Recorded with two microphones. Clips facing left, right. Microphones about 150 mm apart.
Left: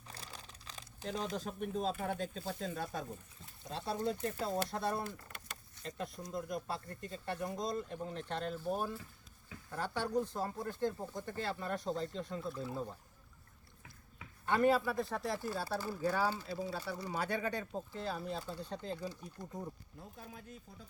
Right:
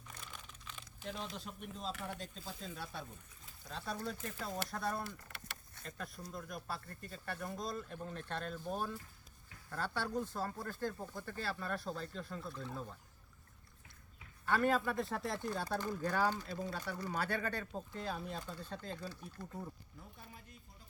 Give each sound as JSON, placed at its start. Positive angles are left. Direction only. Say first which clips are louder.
{"t": 0.1, "sound": "crumpling", "louder": "left 2 dB", "side_deg": 35}
{"t": 2.5, "sound": "speech", "louder": "left 4 dB", "side_deg": 55}
{"t": 3.6, "sound": "speech", "louder": "left 5 dB", "side_deg": 30}
{"t": 6.2, "sound": "speech", "louder": "left 6 dB", "side_deg": 20}
{"t": 12.4, "sound": "speech", "louder": "left 5 dB", "side_deg": 5}
{"t": 14.4, "sound": "speech", "louder": "left 3 dB", "side_deg": 15}